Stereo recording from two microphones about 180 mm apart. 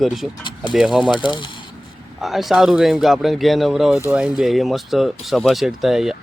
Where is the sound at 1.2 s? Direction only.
25° left (ahead or behind).